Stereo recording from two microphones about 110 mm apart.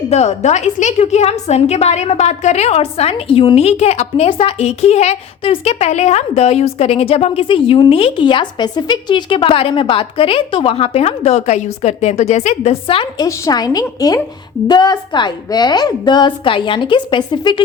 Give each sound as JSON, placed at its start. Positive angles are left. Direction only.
{"t": 0.1, "sound": "a woman's voice", "side_deg": 85}
{"t": 13.1, "sound": "a woman's voice", "side_deg": 35}